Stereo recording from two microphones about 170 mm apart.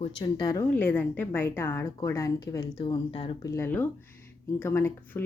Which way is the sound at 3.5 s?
15° left (ahead or behind).